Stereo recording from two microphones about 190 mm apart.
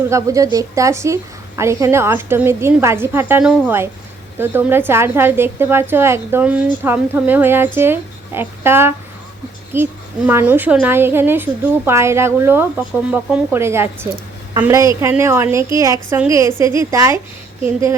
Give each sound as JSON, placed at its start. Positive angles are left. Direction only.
{"t": 0.1, "sound": "a woman's voice", "side_deg": -15}